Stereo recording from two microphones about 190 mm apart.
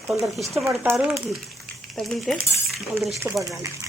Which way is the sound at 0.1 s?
Centre (ahead or behind).